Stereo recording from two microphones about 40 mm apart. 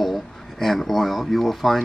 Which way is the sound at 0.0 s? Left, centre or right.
Centre.